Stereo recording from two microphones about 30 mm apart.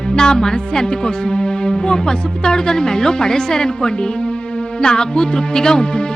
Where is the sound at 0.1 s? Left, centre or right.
Left.